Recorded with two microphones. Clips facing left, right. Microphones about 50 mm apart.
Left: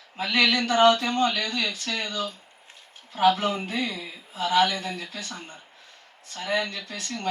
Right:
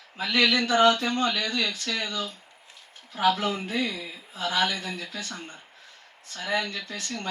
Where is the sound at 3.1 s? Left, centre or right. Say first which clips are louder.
Left 3 dB; left.